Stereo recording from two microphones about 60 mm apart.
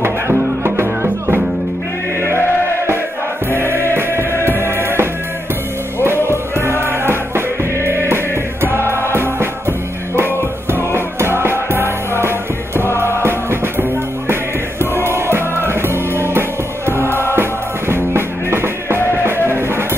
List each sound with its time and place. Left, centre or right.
0.0 s music: right
3.5 s music: right
6.2 s music: right